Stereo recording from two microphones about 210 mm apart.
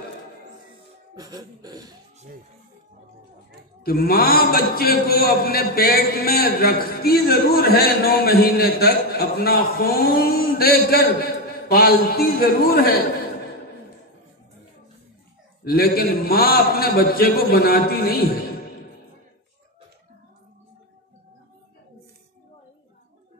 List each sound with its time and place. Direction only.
1.1 s a sound: 20° right (ahead or behind)
3.8 s a man's voice: 45° left (ahead or behind)
15.6 s a man's voice: 45° left (ahead or behind)